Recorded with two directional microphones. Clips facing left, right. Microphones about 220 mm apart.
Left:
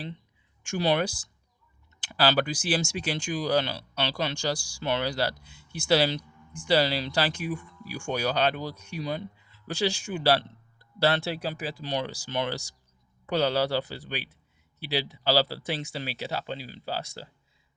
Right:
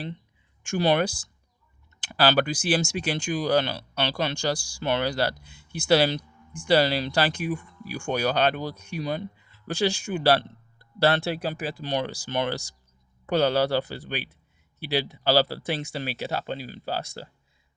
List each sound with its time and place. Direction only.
0.6 s speech: 50° right (ahead or behind)